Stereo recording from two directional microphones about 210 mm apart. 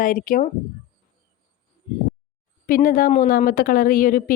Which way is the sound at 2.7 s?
40° left (ahead or behind).